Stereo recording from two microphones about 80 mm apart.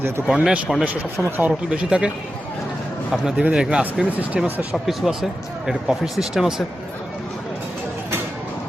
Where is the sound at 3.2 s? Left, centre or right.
Centre.